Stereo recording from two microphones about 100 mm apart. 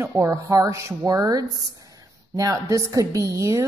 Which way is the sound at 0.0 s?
30° right (ahead or behind).